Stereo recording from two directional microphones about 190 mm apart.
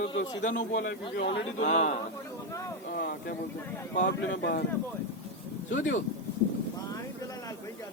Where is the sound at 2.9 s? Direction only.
55° left (ahead or behind).